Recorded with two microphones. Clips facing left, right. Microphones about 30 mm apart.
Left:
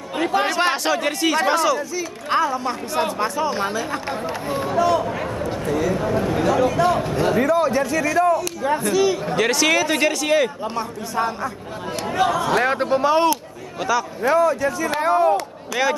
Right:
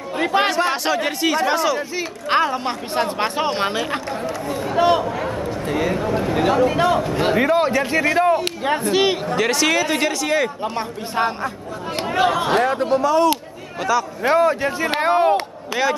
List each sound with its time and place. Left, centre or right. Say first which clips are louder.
0.2 s speech: right 2 dB; right
0.8 s speech: even; centre
2.0 s speech: right 2 dB; right
9.3 s a man's voice: even; centre
12.1 s speech: right 1 dB; right
12.9 s speech: right 1 dB; left
14.2 s speech: even; right